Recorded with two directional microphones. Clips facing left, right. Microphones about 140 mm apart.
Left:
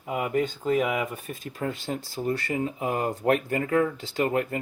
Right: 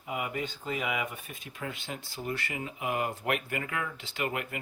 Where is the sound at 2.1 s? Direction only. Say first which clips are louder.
Left 8 dB; 30° left (ahead or behind).